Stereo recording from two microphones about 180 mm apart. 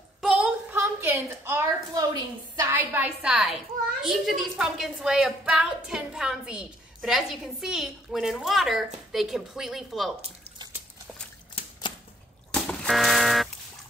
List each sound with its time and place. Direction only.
0.2 s a sound: 5° right (ahead or behind)
2.5 s a woman's voice: 15° right (ahead or behind)
11.6 s typewriter: 30° left (ahead or behind)
12.6 s fire alarm: centre (ahead or behind)